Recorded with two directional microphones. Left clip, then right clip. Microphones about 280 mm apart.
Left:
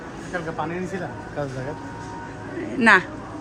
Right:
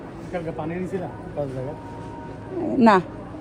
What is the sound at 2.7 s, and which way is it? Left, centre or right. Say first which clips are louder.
Speech: left 1 dB; centre.